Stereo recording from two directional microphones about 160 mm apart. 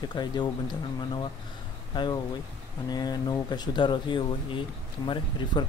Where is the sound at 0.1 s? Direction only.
25° left (ahead or behind).